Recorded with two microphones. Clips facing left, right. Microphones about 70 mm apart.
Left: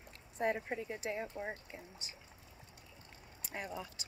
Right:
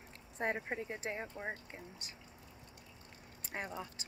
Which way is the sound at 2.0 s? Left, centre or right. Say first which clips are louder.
Left 1 dB; right.